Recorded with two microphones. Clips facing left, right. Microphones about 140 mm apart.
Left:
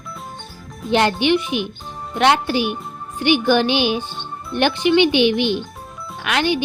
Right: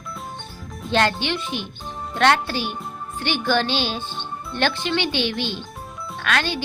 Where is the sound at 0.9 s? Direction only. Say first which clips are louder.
Left 5 dB; 15° left (ahead or behind).